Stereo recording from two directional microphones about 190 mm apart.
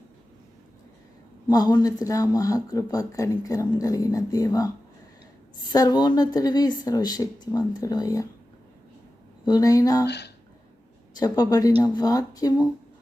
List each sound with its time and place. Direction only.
1.5 s speech: 20° left (ahead or behind)
5.7 s speech: 20° left (ahead or behind)
9.5 s speech: 20° left (ahead or behind)
10.1 s speech: 65° left (ahead or behind)
11.1 s a woman's voice: 20° left (ahead or behind)